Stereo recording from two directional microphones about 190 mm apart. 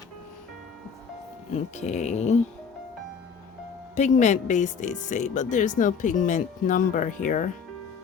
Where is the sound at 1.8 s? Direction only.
35° left (ahead or behind).